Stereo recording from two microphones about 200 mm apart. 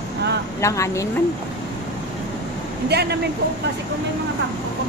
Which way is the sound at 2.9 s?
55° right (ahead or behind).